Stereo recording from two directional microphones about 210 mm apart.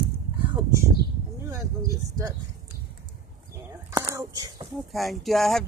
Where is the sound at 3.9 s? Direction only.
15° right (ahead or behind).